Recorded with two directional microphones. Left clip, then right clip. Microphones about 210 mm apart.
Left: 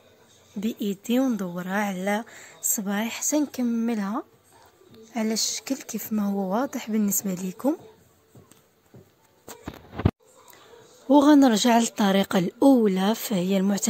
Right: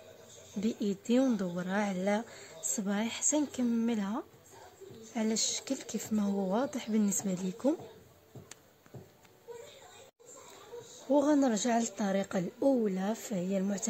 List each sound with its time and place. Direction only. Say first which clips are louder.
0.6 s speech: left 4 dB; 15° left (ahead or behind)
11.1 s speech: left 10 dB; 45° left (ahead or behind)